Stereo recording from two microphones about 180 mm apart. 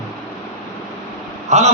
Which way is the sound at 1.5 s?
40° right (ahead or behind).